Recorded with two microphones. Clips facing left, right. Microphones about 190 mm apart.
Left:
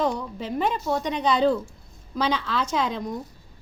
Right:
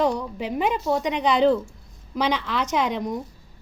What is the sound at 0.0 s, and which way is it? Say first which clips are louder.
A woman's voice: right 3 dB; 15° right (ahead or behind).